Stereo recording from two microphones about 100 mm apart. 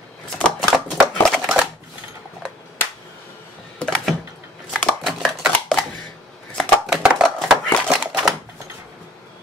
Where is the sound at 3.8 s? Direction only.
5° left (ahead or behind).